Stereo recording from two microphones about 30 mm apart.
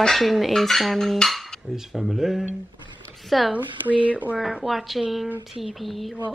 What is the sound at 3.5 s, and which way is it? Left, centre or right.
Speech, right.